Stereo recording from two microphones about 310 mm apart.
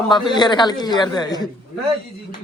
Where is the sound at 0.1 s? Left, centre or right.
Centre.